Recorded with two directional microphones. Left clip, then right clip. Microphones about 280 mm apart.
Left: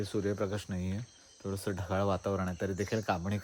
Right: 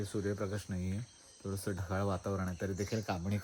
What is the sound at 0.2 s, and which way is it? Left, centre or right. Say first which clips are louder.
Speech: left 4 dB; left.